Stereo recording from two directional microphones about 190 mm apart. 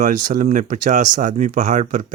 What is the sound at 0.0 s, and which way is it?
Speech, 40° right (ahead or behind).